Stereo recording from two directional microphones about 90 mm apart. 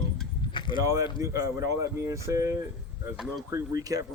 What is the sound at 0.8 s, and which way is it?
A man's voice, 35° right (ahead or behind).